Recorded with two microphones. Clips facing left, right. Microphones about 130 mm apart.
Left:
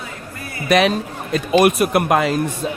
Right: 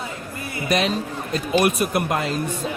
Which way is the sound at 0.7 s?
70° left (ahead or behind).